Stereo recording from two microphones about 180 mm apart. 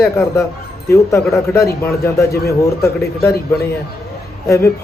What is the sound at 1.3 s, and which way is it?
A man's voice, 15° left (ahead or behind).